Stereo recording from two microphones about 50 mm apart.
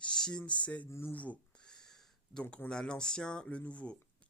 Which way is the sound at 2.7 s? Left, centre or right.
Centre.